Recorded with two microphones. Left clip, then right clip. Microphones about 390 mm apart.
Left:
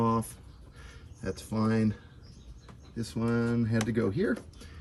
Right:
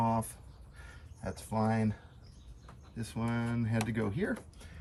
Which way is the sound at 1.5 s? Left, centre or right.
Left.